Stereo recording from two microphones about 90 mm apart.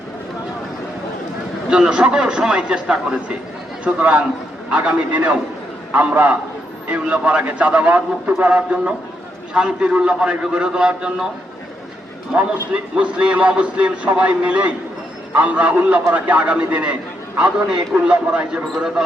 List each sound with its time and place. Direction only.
1.7 s a man's voice: 10° right (ahead or behind)
13.0 s a man's voice: 15° right (ahead or behind)